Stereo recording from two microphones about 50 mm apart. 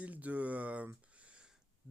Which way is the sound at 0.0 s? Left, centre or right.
Right.